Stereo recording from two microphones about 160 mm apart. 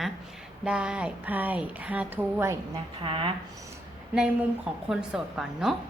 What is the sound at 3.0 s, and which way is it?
Speech, 30° right (ahead or behind).